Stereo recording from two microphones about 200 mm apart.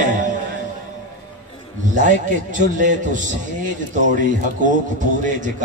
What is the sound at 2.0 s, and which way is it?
A man's voice, 40° right (ahead or behind).